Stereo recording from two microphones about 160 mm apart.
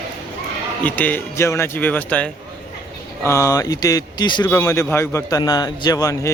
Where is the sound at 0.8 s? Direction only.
10° left (ahead or behind).